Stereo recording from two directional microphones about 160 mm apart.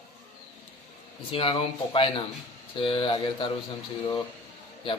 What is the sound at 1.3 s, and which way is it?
A man's voice, 35° left (ahead or behind).